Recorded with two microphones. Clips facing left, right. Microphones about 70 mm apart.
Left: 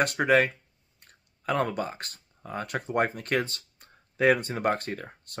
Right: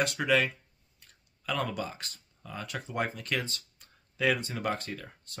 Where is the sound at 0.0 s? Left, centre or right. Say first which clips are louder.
Left 5 dB; left.